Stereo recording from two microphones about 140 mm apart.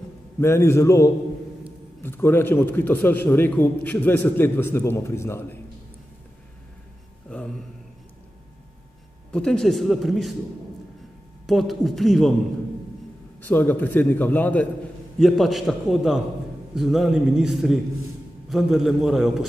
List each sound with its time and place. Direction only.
0.4 s a man's voice: 20° left (ahead or behind)
9.3 s speech: 5° left (ahead or behind)
11.4 s speech: centre (ahead or behind)
13.4 s a man's voice: 15° left (ahead or behind)
15.1 s speech: centre (ahead or behind)